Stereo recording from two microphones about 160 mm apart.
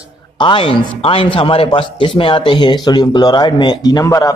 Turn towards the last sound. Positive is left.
turn(degrees=20)  # may be behind; listen again after turning